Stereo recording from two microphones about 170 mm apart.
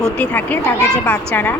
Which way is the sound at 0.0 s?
10° left (ahead or behind).